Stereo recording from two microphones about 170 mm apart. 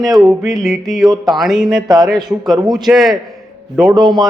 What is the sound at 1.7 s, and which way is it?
Speech, 25° right (ahead or behind).